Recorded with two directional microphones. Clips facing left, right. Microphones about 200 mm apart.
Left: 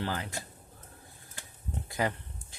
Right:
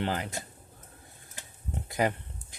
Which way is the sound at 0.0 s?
20° right (ahead or behind).